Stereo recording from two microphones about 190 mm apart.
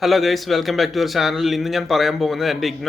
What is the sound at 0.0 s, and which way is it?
A man's voice, centre (ahead or behind).